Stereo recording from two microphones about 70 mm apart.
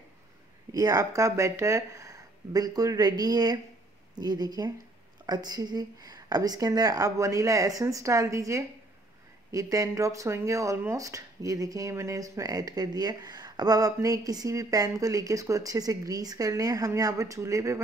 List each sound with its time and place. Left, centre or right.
0.7 s speech: right